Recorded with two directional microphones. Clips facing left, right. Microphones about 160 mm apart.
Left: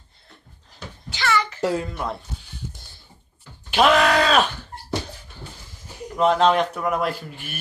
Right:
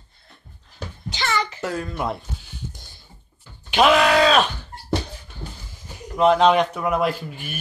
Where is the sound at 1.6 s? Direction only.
30° left (ahead or behind).